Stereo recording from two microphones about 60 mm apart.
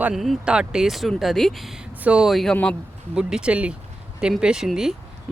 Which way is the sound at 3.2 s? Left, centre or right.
Centre.